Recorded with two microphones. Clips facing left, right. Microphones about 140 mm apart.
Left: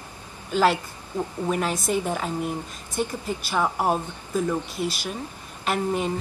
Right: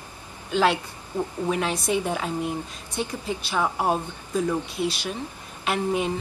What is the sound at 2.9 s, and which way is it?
Speech, 50° left (ahead or behind).